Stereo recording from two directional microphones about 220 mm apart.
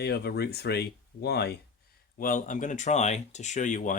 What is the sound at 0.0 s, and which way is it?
Speech, 50° left (ahead or behind).